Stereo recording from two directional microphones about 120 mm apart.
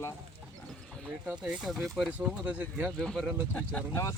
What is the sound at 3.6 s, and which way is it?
Speech, 15° left (ahead or behind).